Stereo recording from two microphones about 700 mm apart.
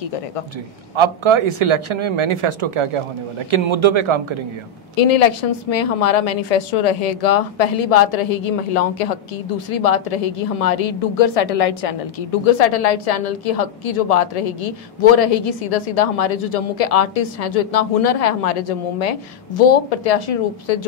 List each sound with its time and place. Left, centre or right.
0.9 s a man's voice: right
4.9 s a woman's voice: left